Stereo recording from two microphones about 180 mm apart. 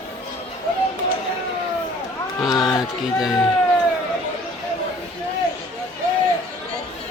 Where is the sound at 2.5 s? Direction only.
25° left (ahead or behind).